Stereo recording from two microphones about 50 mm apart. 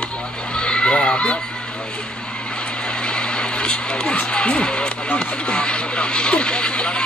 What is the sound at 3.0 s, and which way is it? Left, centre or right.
Speech, centre.